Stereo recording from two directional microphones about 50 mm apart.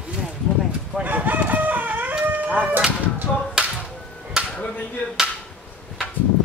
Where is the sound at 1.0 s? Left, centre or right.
Right.